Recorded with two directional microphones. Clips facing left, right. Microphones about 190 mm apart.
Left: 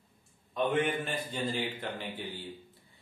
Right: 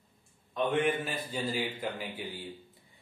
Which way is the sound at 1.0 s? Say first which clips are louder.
Even; 5° right (ahead or behind).